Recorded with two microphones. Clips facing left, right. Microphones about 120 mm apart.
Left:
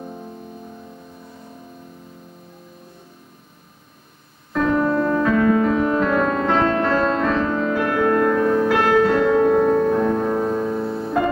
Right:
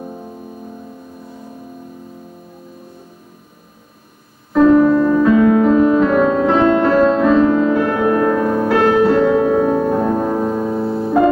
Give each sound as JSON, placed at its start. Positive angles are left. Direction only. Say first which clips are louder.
{"t": 0.0, "sound": "music", "louder": "right 4 dB", "side_deg": -10}
{"t": 4.6, "sound": "music", "louder": "right 9 dB", "side_deg": -5}
{"t": 7.9, "sound": "music", "louder": "right 3 dB", "side_deg": -15}
{"t": 10.8, "sound": "music", "louder": "right 5 dB", "side_deg": -25}